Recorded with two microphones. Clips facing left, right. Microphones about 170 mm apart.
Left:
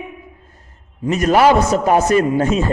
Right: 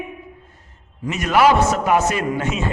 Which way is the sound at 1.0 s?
40° left (ahead or behind).